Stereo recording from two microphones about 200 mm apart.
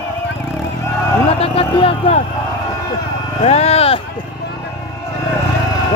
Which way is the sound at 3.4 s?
30° left (ahead or behind).